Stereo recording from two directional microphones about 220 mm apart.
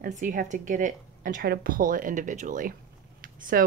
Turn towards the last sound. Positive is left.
turn(degrees=-40)  # may be behind; listen again after turning